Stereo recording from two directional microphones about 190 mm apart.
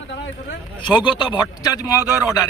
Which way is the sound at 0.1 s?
65° left (ahead or behind).